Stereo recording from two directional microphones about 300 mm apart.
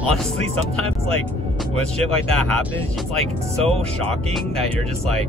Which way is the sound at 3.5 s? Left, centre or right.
Centre.